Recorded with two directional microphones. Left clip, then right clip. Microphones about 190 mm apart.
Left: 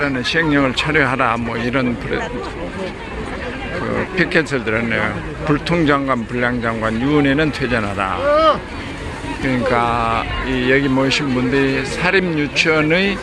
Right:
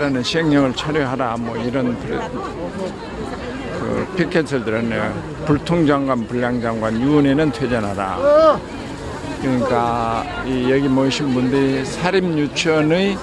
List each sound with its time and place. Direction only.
0.0 s speech: 20° right (ahead or behind)
0.8 s speech: 5° right (ahead or behind)
4.2 s speech: 15° right (ahead or behind)
9.5 s speech: 15° right (ahead or behind)